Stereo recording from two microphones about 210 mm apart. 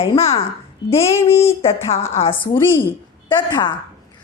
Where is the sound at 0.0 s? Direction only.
30° left (ahead or behind).